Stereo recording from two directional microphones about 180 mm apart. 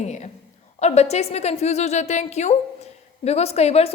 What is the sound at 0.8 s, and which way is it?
A woman's voice, 35° left (ahead or behind).